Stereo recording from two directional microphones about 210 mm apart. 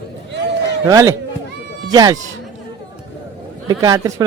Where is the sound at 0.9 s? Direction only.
15° right (ahead or behind).